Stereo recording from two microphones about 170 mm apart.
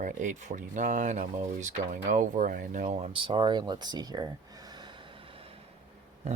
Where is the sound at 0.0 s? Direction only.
50° right (ahead or behind).